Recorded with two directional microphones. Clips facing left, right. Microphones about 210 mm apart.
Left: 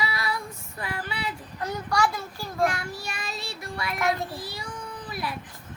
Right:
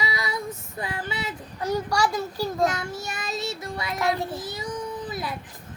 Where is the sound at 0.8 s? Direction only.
25° right (ahead or behind).